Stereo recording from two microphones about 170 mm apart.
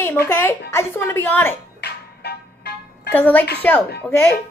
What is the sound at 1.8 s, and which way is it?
Music, 70° left (ahead or behind).